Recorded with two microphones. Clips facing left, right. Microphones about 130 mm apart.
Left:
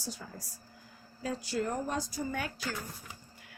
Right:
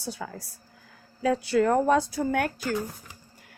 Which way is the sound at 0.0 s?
70° right (ahead or behind).